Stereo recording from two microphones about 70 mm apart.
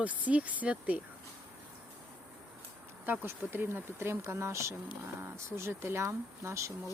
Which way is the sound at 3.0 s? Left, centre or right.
Right.